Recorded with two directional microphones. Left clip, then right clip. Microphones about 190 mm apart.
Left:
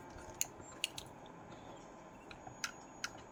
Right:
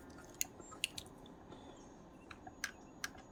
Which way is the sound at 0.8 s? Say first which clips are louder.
Even; 65° right (ahead or behind).